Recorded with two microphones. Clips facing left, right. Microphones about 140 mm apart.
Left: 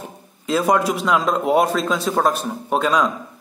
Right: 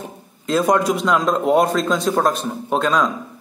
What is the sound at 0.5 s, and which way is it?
A man's voice, 5° left (ahead or behind).